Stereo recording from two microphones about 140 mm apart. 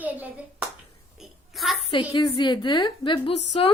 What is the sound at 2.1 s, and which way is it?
A woman's voice, 35° left (ahead or behind).